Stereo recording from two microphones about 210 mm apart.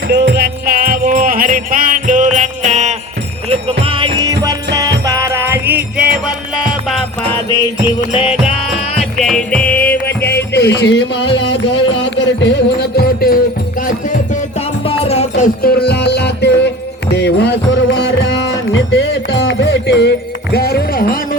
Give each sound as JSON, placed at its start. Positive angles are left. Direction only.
{"t": 0.1, "sound": "music", "side_deg": -55}
{"t": 3.5, "sound": "jingle bell", "side_deg": -30}
{"t": 4.2, "sound": "music", "side_deg": -20}
{"t": 9.2, "sound": "music", "side_deg": 5}
{"t": 10.1, "sound": "music", "side_deg": 50}
{"t": 14.8, "sound": "music", "side_deg": 30}
{"t": 15.6, "sound": "music", "side_deg": 50}